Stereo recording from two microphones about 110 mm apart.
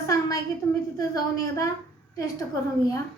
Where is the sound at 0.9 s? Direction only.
30° left (ahead or behind).